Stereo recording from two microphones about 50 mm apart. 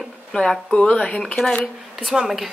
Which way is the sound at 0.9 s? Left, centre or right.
Left.